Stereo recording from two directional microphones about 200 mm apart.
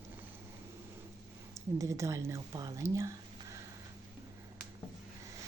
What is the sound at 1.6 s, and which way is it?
Speech, 15° right (ahead or behind).